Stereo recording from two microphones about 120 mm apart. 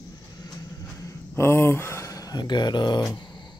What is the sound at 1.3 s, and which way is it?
Speech, 20° left (ahead or behind).